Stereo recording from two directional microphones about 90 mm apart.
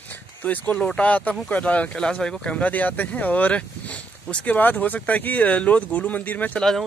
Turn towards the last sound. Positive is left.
turn(degrees=15)  # may be behind; listen again after turning